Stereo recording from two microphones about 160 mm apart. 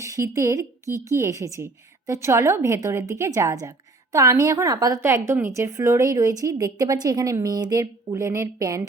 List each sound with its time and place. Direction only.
0.0 s a woman's voice: 20° right (ahead or behind)